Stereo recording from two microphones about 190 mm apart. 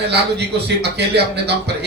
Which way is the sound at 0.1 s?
60° right (ahead or behind).